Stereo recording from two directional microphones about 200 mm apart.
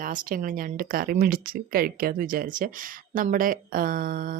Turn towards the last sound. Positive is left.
turn(degrees=-45)  # may be behind; listen again after turning